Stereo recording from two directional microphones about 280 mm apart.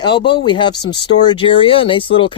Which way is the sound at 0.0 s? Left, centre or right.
Centre.